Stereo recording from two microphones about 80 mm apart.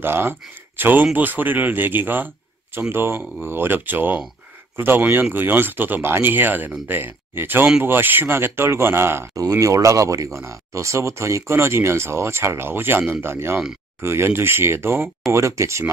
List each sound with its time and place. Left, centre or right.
0.0 s a man's voice: right
9.3 s speech: right